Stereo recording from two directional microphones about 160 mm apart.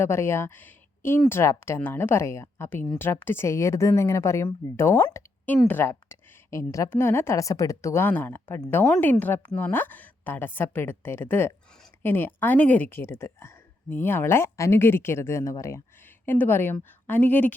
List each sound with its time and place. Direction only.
0.0 s a woman's voice: 15° left (ahead or behind)